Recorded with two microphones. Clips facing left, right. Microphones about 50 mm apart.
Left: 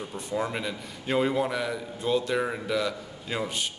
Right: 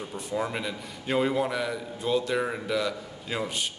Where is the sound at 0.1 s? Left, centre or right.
Centre.